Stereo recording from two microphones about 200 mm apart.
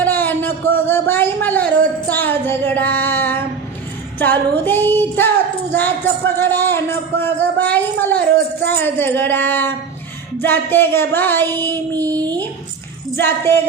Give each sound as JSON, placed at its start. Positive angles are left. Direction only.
{"t": 0.0, "sound": "a sound", "side_deg": 10}
{"t": 2.0, "sound": "a man's voice", "side_deg": 10}
{"t": 11.9, "sound": "music", "side_deg": -20}
{"t": 13.1, "sound": "a man's voice", "side_deg": 10}